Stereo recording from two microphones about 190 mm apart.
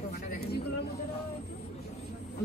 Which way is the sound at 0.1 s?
55° left (ahead or behind).